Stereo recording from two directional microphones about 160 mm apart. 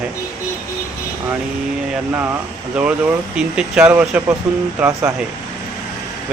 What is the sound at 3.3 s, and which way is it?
Speech, 5° right (ahead or behind).